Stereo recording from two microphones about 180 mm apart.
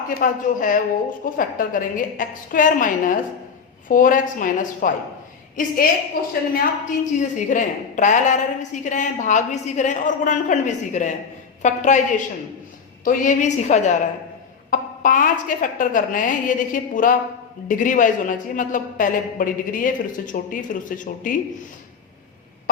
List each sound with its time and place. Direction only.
0.1 s a woman's voice: 50° left (ahead or behind)